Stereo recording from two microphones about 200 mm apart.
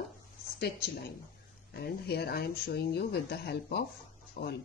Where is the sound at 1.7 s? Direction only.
50° left (ahead or behind).